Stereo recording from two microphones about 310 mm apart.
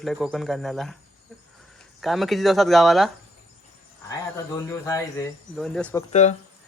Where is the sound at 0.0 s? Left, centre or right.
Centre.